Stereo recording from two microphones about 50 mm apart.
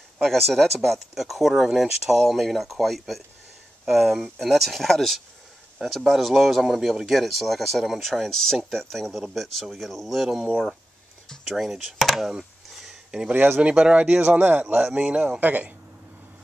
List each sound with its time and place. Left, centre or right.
0.2 s speech: centre
13.3 s speech: right
13.6 s speech: right
14.4 s speech: right
15.4 s speech: right